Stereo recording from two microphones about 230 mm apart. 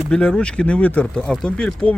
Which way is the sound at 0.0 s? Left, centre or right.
Centre.